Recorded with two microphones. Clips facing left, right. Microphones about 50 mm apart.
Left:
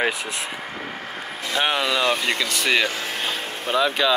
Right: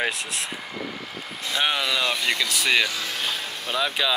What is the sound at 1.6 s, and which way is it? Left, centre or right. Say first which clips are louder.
Speech: left 3 dB; centre.